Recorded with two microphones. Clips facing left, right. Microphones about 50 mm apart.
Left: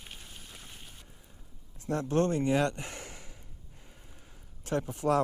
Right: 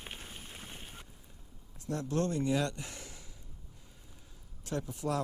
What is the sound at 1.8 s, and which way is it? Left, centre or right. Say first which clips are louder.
Speech: left 5 dB; left.